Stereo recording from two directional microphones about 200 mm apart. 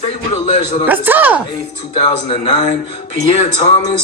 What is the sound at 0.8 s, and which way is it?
Speech, 10° right (ahead or behind).